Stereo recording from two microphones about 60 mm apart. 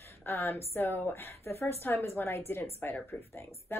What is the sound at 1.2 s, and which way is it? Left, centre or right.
Speech, left.